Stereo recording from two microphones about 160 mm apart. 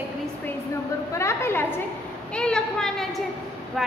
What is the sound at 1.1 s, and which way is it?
Speech, 15° left (ahead or behind).